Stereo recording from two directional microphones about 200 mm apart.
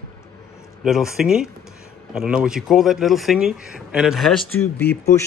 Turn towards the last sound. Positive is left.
turn(degrees=5)  # may be behind; listen again after turning